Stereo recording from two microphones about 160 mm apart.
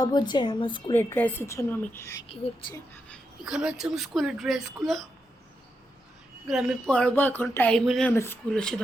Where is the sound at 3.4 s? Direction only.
5° right (ahead or behind).